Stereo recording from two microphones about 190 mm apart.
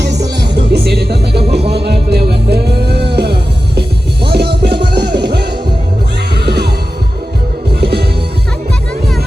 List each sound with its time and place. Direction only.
0.5 s music: 60° right (ahead or behind)
7.7 s music: 55° right (ahead or behind)